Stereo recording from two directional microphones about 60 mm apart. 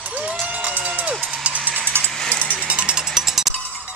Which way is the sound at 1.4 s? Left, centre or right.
Right.